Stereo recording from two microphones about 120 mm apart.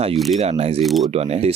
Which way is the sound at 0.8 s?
Centre (ahead or behind).